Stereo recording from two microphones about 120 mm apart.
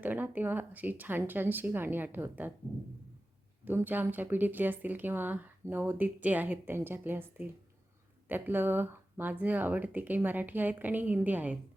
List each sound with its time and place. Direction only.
0.0 s speech: 15° right (ahead or behind)
3.6 s speech: 15° right (ahead or behind)